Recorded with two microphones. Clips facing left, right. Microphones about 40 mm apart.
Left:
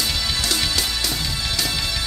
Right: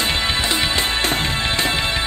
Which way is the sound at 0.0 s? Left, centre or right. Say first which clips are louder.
Right 4 dB; right.